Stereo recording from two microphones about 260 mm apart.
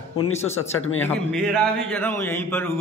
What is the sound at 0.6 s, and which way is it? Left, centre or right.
Speech, left.